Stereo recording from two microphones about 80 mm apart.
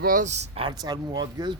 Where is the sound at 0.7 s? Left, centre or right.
Right.